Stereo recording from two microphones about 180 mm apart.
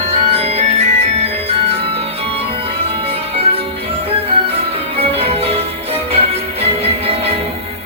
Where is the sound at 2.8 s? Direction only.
35° right (ahead or behind).